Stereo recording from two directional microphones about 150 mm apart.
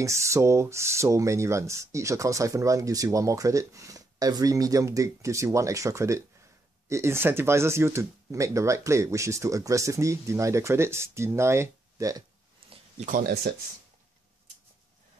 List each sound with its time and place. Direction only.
0.0 s speech: 20° right (ahead or behind)
13.0 s speech: 65° right (ahead or behind); by 13.6 s 90° right